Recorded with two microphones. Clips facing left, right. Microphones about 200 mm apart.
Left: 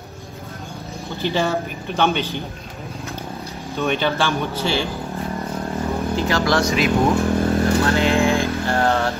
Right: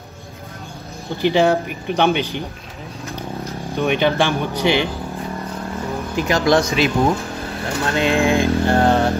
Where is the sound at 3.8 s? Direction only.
15° right (ahead or behind).